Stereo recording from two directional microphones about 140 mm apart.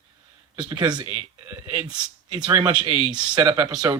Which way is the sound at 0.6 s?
35° right (ahead or behind).